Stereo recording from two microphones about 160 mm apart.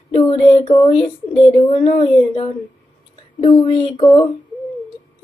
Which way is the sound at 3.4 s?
35° left (ahead or behind).